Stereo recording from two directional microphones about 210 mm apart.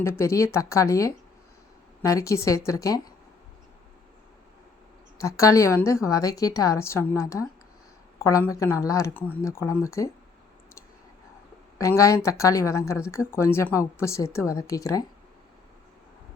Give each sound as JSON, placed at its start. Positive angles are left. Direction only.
{"t": 0.0, "sound": "a woman's voice", "side_deg": 15}
{"t": 5.1, "sound": "a woman's voice", "side_deg": 15}
{"t": 11.8, "sound": "a woman's voice", "side_deg": 15}